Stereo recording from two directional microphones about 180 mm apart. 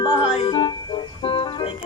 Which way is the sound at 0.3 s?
30° left (ahead or behind).